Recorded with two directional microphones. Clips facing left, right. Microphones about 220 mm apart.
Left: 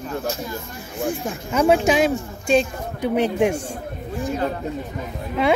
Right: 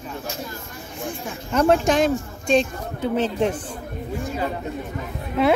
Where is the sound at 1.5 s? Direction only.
5° left (ahead or behind).